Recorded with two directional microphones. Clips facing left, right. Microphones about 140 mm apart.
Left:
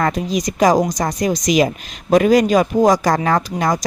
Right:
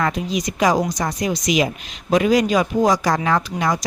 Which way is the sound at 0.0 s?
40° left (ahead or behind).